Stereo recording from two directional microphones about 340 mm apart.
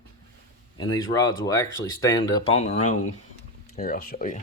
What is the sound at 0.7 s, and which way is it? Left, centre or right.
Speech, centre.